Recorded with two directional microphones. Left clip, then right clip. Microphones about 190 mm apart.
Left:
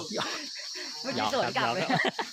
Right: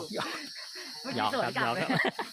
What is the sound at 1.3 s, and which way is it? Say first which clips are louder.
Speech: left 2 dB; 35° left (ahead or behind).